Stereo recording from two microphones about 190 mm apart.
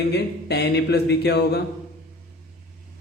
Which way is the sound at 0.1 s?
60° left (ahead or behind).